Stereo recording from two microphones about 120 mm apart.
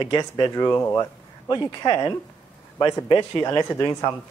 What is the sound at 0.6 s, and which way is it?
Speech, 20° left (ahead or behind).